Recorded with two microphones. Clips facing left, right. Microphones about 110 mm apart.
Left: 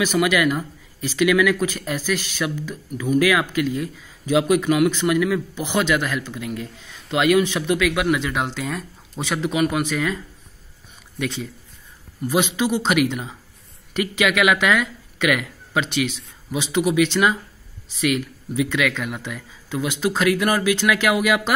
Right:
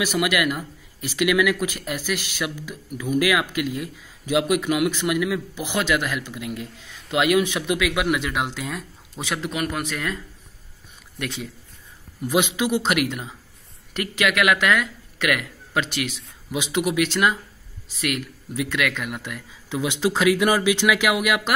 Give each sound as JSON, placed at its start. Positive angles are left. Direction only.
{"t": 0.0, "sound": "speech", "side_deg": -10}
{"t": 19.7, "sound": "speech", "side_deg": -20}